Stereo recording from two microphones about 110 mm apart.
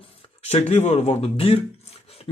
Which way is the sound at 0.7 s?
70° left (ahead or behind).